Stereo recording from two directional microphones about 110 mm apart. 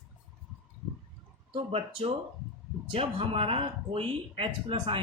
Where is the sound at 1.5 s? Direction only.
60° right (ahead or behind).